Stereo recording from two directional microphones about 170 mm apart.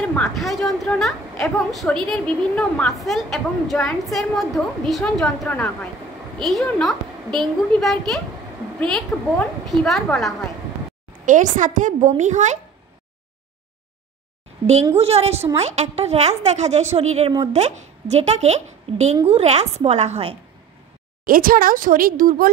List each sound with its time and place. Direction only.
0.0 s a woman's voice: 5° left (ahead or behind)
11.2 s a woman's voice: 45° right (ahead or behind)
15.0 s a woman's voice: 35° right (ahead or behind)
21.3 s speech: 55° right (ahead or behind)